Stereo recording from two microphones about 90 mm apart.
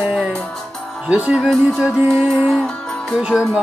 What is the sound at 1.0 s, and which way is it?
Speech, 10° right (ahead or behind).